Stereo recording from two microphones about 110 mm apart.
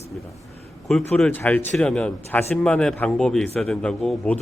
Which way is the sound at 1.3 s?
15° left (ahead or behind).